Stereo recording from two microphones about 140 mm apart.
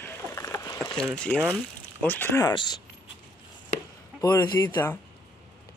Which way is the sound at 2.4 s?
30° left (ahead or behind).